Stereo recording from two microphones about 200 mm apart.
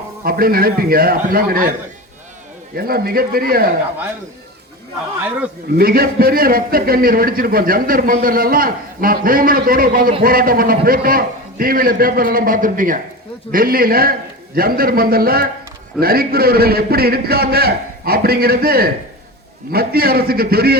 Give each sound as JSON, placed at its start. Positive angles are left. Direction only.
{"t": 0.3, "sound": "a man's voice", "side_deg": -45}
{"t": 2.7, "sound": "a man's voice", "side_deg": -50}
{"t": 5.7, "sound": "a man's voice", "side_deg": -50}